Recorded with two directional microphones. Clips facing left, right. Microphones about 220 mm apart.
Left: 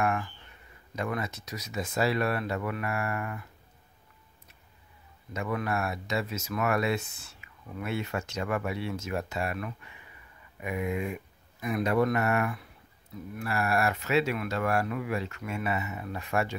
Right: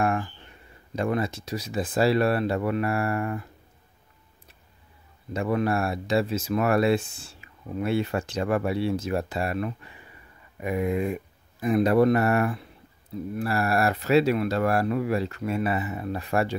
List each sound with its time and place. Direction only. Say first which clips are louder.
0.0 s a sound: right 4 dB; 30° right (ahead or behind)
0.9 s speech: right 7 dB; 30° right (ahead or behind)
5.3 s speech: right 6 dB; 30° right (ahead or behind)